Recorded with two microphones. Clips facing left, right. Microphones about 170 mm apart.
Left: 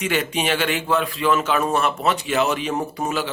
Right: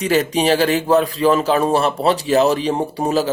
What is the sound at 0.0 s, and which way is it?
Speech, 35° right (ahead or behind).